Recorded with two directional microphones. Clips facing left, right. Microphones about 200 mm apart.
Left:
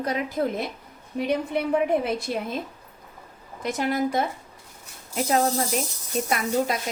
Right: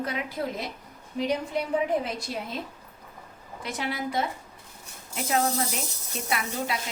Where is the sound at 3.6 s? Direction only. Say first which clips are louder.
Left 7 dB; 45° left (ahead or behind).